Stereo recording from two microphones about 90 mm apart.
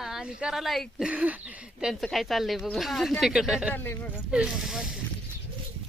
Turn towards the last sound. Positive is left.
turn(degrees=-5)  # may be behind; listen again after turning